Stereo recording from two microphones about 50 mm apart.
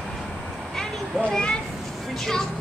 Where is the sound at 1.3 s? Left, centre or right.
Centre.